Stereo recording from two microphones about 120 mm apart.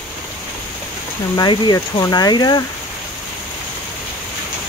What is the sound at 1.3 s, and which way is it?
Speech, 35° left (ahead or behind).